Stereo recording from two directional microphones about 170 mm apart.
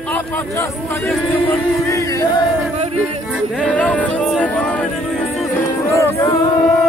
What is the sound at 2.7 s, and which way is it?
Yodeling, 35° right (ahead or behind).